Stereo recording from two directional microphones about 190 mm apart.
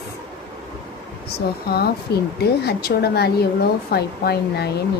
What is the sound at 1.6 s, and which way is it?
Speech, 55° left (ahead or behind).